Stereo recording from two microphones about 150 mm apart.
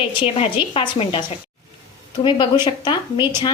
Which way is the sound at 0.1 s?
35° left (ahead or behind).